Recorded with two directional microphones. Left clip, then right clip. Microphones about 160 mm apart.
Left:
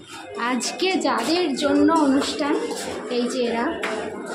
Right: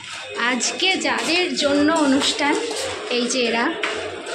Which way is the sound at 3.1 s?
5° right (ahead or behind).